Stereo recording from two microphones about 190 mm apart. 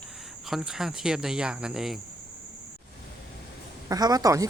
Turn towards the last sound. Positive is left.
turn(degrees=-20)  # may be behind; listen again after turning